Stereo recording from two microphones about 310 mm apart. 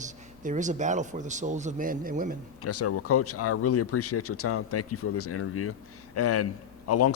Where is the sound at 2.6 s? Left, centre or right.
Left.